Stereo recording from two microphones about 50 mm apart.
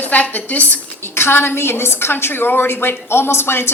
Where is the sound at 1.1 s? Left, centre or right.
Left.